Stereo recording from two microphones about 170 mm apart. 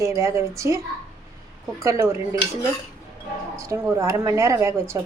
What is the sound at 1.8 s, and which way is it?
Speech, 15° right (ahead or behind).